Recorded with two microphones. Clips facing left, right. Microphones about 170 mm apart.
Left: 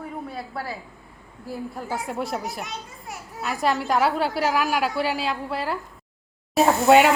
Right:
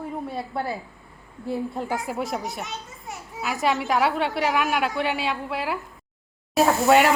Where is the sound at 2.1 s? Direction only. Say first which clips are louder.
Even; centre (ahead or behind).